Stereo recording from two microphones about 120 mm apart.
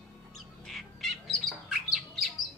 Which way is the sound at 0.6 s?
Centre (ahead or behind).